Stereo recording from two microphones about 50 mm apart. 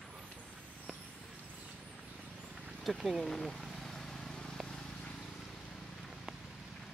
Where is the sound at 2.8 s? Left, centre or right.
Centre.